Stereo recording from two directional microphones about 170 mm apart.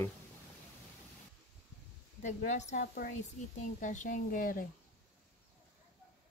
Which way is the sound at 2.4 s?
45° left (ahead or behind).